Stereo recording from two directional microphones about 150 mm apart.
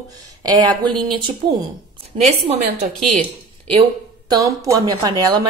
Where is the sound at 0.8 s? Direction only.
30° right (ahead or behind).